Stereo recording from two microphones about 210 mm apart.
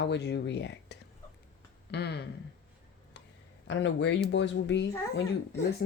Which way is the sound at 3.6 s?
60° left (ahead or behind).